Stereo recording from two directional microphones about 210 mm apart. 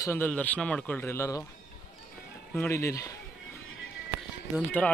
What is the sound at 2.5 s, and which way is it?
Speech, 10° left (ahead or behind).